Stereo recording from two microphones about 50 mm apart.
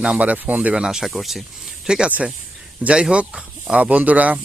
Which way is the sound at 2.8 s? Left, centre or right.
Right.